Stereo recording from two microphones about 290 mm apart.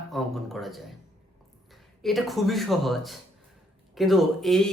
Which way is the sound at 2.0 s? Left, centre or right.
Centre.